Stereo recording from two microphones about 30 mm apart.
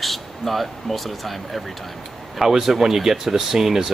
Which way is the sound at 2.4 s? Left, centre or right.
Centre.